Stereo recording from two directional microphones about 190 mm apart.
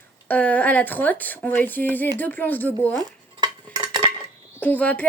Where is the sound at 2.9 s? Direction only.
20° right (ahead or behind).